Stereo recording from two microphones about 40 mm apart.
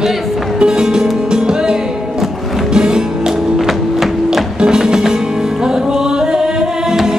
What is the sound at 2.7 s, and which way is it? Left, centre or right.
Music, centre.